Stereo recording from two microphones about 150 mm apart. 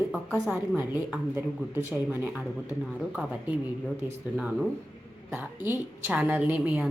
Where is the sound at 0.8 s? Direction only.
15° right (ahead or behind).